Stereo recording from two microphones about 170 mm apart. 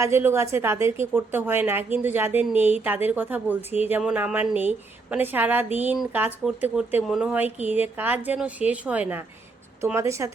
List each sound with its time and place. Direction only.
0.0 s a woman's voice: 15° right (ahead or behind)